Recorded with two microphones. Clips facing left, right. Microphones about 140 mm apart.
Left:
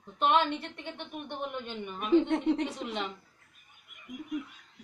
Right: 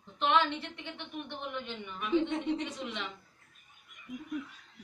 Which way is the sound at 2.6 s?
40° left (ahead or behind).